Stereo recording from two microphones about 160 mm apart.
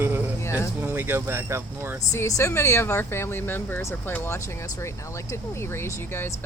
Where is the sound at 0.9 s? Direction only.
10° right (ahead or behind).